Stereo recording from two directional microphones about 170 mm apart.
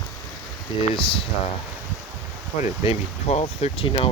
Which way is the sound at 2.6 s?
35° left (ahead or behind).